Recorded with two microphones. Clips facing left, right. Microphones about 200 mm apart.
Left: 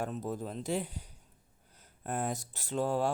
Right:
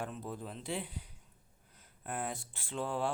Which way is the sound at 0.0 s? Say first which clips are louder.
Left 5 dB; 40° left (ahead or behind).